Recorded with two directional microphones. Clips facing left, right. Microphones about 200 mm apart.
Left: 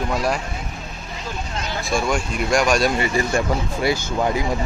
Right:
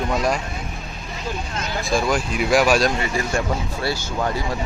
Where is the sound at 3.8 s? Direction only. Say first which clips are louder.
Left 5 dB; 15° left (ahead or behind).